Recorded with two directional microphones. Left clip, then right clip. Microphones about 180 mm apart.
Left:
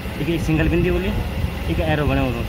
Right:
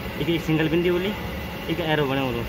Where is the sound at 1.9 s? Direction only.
20° left (ahead or behind).